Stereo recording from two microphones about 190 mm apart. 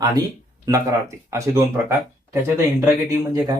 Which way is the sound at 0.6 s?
15° right (ahead or behind).